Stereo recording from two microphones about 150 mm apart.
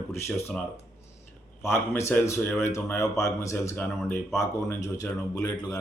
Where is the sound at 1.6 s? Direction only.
15° left (ahead or behind).